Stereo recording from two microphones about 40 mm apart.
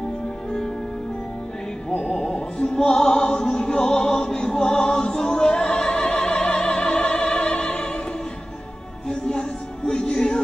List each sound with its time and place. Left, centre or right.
2.0 s music: left
2.6 s music: centre
6.2 s opera: centre
7.0 s music: left
7.7 s opera: left
9.1 s music: left